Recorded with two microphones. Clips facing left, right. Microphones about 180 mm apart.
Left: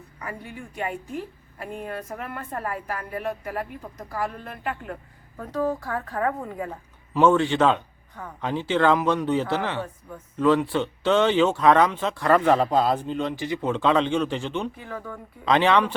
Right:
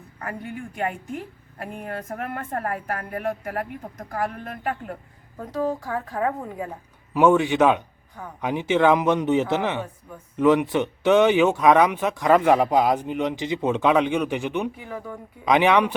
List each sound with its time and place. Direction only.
1.5 s a woman's voice: 50° right (ahead or behind)
5.4 s speech: 15° right (ahead or behind)